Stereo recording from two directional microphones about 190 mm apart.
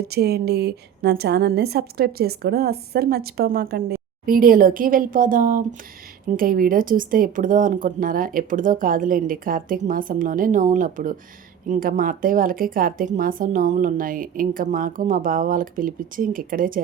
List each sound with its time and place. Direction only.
0.0 s a woman's voice: 55° right (ahead or behind)